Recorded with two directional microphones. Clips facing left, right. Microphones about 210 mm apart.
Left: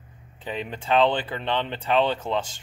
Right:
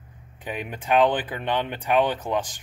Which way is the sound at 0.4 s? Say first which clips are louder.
Left 1 dB; 15° right (ahead or behind).